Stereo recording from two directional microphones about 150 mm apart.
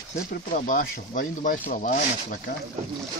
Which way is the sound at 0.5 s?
65° left (ahead or behind).